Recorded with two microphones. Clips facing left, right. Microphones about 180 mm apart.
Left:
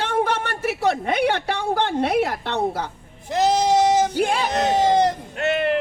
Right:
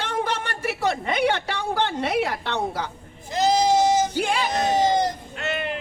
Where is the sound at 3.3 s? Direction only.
70° left (ahead or behind).